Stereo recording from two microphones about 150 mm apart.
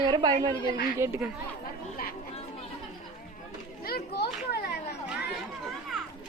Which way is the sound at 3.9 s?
90° left.